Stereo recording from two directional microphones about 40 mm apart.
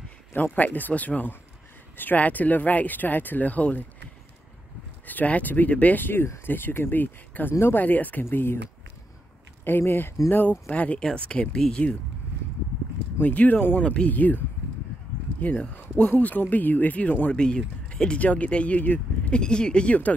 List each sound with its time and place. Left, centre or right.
0.4 s speech: left
5.0 s speech: left
8.3 s speech: left
9.7 s speech: left
10.7 s speech: left
11.5 s speech: centre
13.2 s speech: left
13.8 s speech: left
14.1 s speech: left
15.4 s speech: left
17.3 s speech: left
18.8 s a sound: left
19.4 s speech: left